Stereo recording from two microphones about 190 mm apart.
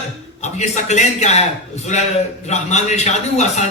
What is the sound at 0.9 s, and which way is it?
Speech, 35° left (ahead or behind).